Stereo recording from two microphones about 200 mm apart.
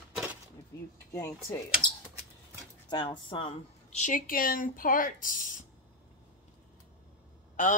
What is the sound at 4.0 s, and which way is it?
Speech, 40° left (ahead or behind).